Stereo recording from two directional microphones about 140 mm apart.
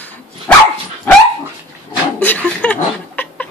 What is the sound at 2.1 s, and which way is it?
Chuckle, 10° left (ahead or behind).